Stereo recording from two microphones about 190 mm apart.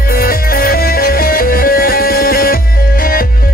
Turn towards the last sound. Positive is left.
turn(degrees=50)  # may be behind; listen again after turning